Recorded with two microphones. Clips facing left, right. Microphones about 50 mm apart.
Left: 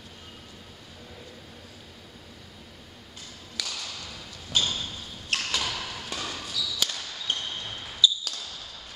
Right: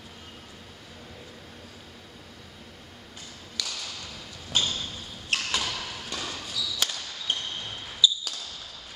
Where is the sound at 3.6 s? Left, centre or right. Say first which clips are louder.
Even; centre.